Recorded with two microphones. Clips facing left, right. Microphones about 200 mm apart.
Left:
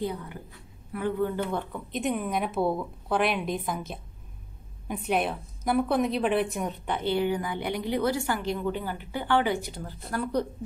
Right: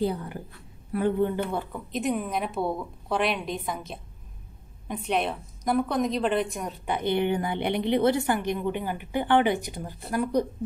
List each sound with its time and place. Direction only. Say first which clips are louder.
0.0 s a woman's voice: right 4 dB; 35° right (ahead or behind)
1.5 s a woman's voice: right 1 dB; 5° right (ahead or behind)
6.9 s a woman's voice: right 2 dB; 15° right (ahead or behind)